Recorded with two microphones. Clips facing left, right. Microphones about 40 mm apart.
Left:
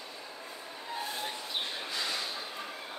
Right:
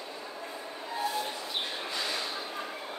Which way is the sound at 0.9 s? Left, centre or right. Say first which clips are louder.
Right 5 dB; right.